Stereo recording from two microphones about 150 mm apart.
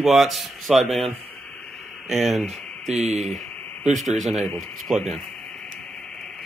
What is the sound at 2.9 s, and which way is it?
Speech, 50° right (ahead or behind).